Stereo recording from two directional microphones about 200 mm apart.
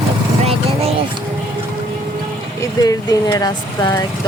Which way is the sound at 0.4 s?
30° right (ahead or behind).